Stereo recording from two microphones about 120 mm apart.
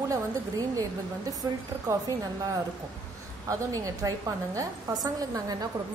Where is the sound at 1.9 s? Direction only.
25° right (ahead or behind).